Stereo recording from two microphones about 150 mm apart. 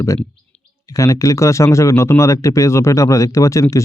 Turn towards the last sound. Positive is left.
turn(degrees=20)  # may be behind; listen again after turning